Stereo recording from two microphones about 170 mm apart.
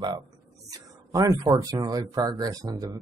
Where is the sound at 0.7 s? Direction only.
20° right (ahead or behind).